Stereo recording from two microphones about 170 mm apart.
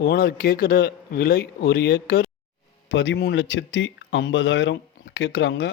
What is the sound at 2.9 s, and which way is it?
Speech, 90° left.